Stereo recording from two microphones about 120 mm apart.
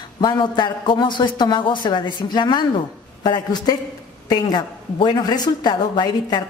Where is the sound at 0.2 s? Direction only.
40° left (ahead or behind).